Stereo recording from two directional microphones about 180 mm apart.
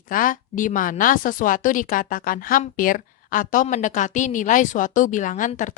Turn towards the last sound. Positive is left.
turn(degrees=45)  # may be behind; listen again after turning